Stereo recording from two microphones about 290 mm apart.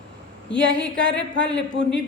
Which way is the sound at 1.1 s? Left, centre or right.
Left.